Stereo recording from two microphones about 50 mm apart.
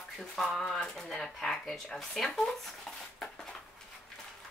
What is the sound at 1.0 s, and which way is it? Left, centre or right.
Speech, centre.